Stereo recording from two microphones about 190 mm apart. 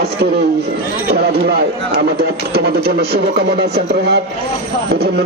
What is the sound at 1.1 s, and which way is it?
Speech, 55° right (ahead or behind).